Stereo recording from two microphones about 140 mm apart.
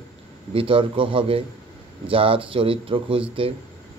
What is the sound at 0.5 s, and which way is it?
Speech, 40° right (ahead or behind).